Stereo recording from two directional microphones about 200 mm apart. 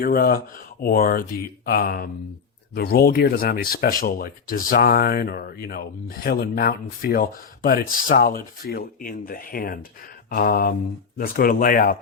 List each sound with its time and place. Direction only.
0.0 s speech: 50° left (ahead or behind)